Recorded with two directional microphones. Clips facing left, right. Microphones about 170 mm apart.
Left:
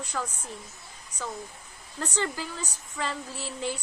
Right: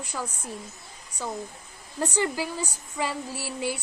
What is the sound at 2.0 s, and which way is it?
A woman's voice, 10° right (ahead or behind).